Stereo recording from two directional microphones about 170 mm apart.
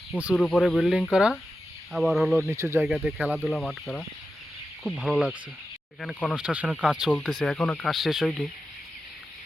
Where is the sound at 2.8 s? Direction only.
5° right (ahead or behind).